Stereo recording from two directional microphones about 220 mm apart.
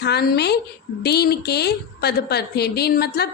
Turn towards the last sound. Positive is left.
turn(degrees=45)  # may be behind; listen again after turning